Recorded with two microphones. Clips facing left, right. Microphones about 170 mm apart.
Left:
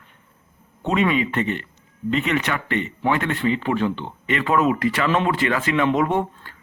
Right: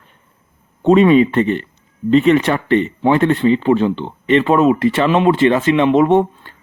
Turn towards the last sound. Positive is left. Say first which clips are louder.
# right 9 dB
turn(degrees=-25)  # may be behind; listen again after turning